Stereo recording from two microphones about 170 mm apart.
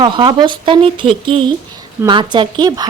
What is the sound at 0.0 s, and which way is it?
Speech, 30° right (ahead or behind).